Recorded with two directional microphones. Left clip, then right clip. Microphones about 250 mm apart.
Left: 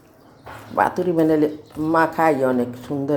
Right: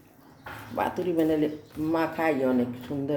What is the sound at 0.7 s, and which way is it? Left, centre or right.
Speech, centre.